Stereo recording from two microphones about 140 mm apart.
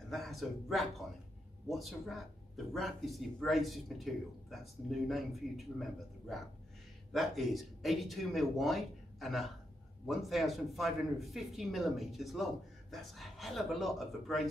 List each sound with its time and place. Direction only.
0.1 s a man's voice: centre (ahead or behind)